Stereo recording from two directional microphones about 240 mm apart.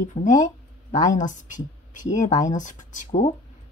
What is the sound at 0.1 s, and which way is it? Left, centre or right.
Speech, left.